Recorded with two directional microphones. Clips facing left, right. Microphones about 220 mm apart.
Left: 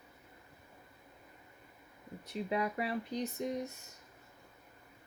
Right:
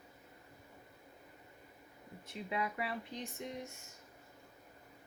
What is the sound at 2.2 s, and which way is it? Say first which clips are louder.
Speech: left 5 dB; 40° left (ahead or behind).